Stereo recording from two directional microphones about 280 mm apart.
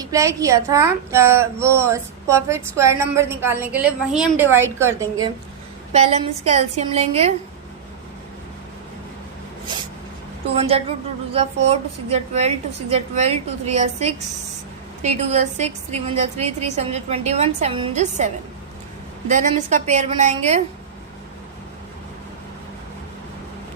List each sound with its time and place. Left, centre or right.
0.0 s a woman's voice: centre
5.9 s a woman's voice: right
10.5 s a woman's voice: right
19.3 s a woman's voice: right